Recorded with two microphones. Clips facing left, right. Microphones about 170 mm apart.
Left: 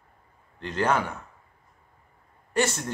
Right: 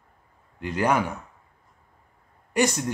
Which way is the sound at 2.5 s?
15° right (ahead or behind).